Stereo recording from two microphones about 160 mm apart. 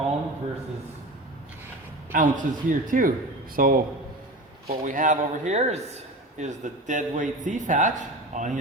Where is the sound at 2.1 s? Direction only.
55° right (ahead or behind).